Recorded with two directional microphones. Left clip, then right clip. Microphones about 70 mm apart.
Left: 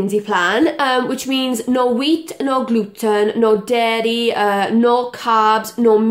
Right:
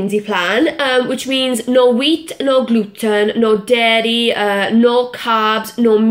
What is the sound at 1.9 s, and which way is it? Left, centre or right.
A woman's voice, left.